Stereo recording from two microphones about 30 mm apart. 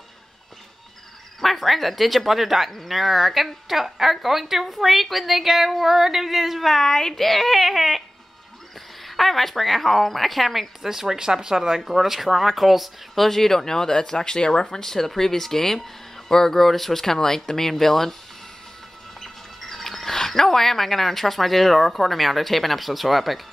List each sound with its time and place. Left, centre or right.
1.4 s speech: centre
6.7 s speech: centre
7.2 s speech: centre
9.0 s speech: centre
10.8 s speech: centre
13.1 s speech: centre
19.1 s speech: centre